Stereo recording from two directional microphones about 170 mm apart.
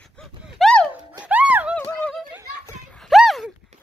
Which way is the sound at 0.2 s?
5° left (ahead or behind).